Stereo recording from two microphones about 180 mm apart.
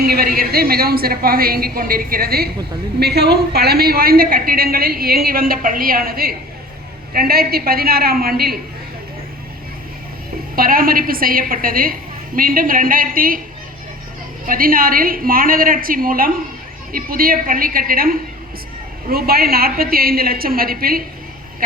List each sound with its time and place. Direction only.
0.0 s a woman's voice: 60° right (ahead or behind)
10.5 s a woman's voice: 55° right (ahead or behind)
14.4 s a woman's voice: 50° right (ahead or behind)